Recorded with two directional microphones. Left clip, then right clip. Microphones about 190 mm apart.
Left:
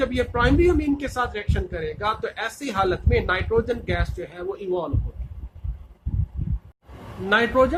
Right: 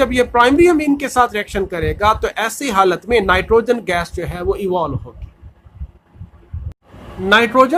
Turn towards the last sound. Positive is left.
turn(degrees=-50)  # may be behind; listen again after turning